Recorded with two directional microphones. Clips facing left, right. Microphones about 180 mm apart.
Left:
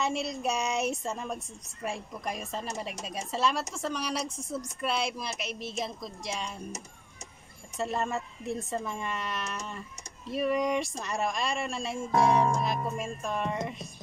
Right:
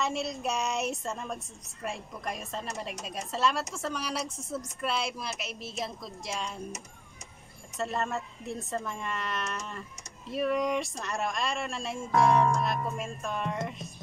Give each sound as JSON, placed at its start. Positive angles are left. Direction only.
{"t": 0.0, "sound": "a woman's voice", "side_deg": 0}
{"t": 7.7, "sound": "a woman's voice", "side_deg": 5}
{"t": 12.1, "sound": "music", "side_deg": 30}
{"t": 12.6, "sound": "speech", "side_deg": 0}